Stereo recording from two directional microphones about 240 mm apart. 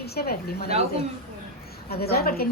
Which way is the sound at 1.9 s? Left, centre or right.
Left.